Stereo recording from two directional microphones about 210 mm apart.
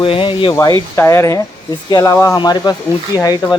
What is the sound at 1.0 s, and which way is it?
Speech, 15° left (ahead or behind).